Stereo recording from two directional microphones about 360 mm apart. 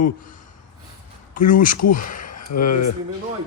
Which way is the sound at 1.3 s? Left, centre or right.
Left.